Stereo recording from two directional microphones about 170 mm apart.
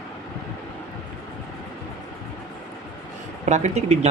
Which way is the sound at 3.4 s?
40° right (ahead or behind).